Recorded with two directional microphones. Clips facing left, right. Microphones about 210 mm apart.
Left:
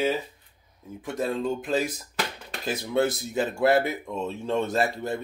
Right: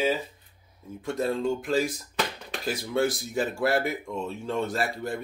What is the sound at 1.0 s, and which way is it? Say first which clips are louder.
Speech: right 1 dB; 15° left (ahead or behind).